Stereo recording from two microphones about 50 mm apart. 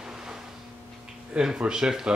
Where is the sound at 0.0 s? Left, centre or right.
Centre.